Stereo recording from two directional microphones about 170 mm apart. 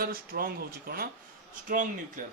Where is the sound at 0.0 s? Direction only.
60° right (ahead or behind).